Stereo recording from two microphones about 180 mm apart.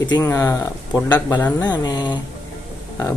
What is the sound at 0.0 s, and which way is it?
Speech, 20° left (ahead or behind).